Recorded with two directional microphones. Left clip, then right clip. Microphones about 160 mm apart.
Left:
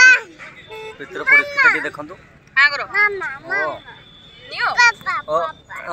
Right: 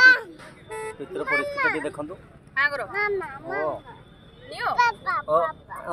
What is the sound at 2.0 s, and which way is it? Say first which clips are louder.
Speech: left 2 dB; centre (ahead or behind).